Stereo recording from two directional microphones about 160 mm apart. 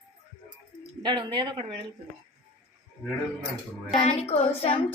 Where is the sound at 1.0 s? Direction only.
30° right (ahead or behind).